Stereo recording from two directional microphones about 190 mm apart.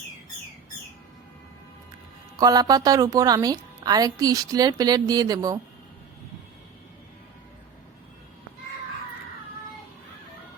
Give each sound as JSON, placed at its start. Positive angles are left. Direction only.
{"t": 2.3, "sound": "a woman's voice", "side_deg": -20}